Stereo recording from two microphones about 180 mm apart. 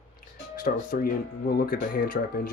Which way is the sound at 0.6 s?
55° left (ahead or behind).